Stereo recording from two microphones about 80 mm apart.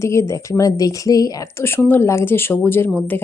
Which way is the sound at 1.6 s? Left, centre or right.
Left.